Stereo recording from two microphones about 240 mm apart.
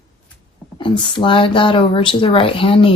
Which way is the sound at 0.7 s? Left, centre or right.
Centre.